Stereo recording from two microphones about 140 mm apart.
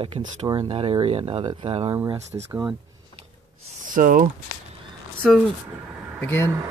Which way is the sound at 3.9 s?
75° right (ahead or behind).